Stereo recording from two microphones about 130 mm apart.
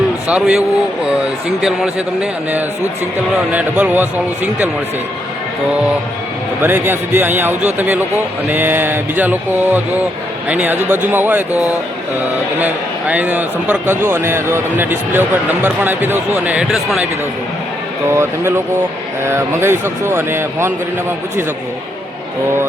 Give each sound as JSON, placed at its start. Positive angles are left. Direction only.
{"t": 0.3, "sound": "a man's voice", "side_deg": -10}
{"t": 1.6, "sound": "speech", "side_deg": -5}
{"t": 3.5, "sound": "a man's voice", "side_deg": -15}
{"t": 6.6, "sound": "a man's voice", "side_deg": -15}
{"t": 18.1, "sound": "a man's voice", "side_deg": -20}